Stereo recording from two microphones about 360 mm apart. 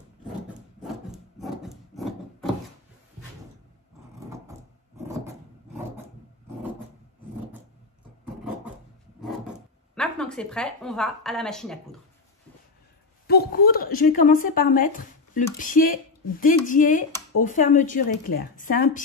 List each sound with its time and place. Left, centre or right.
1.1 s wood: centre
9.9 s a woman's voice: centre
13.3 s speech: left